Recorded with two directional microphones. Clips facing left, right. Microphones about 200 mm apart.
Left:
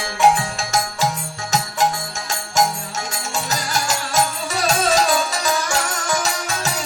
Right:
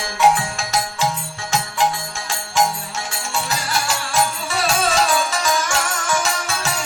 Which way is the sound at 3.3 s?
40° left (ahead or behind).